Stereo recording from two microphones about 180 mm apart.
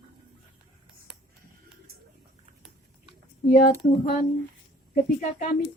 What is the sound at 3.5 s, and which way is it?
Speech, 45° left (ahead or behind).